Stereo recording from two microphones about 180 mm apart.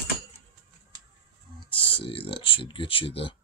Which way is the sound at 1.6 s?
30° left (ahead or behind).